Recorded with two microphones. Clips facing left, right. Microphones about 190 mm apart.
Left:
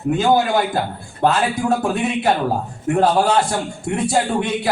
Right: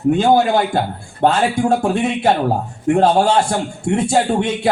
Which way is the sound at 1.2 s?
30° right (ahead or behind).